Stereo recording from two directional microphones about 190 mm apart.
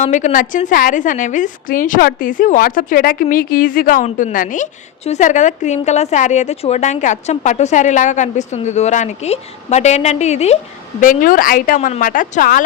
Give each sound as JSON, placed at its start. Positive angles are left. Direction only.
{"t": 0.0, "sound": "a woman's voice", "side_deg": 40}
{"t": 11.0, "sound": "a woman's voice", "side_deg": 45}